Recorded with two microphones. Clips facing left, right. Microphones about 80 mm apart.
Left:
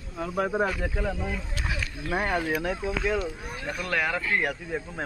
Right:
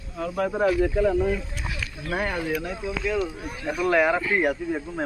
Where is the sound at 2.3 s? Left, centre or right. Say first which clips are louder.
Even; left.